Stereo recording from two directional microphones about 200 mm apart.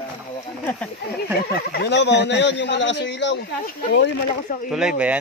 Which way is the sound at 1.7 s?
55° left (ahead or behind).